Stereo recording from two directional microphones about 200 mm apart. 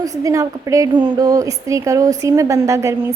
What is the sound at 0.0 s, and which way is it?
A woman's voice, 15° right (ahead or behind).